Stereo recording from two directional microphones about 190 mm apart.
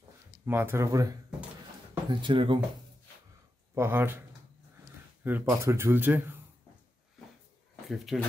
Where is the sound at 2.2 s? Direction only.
25° right (ahead or behind).